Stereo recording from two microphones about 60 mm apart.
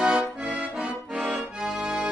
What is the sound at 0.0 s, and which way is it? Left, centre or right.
Accordion, centre.